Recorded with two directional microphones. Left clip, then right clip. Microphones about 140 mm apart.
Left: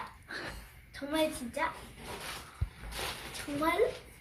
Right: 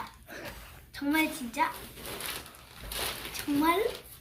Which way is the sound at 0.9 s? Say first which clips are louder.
Right 3 dB; 15° left (ahead or behind).